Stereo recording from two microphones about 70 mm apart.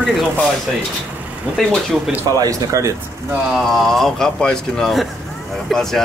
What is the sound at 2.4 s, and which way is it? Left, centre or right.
Speech, right.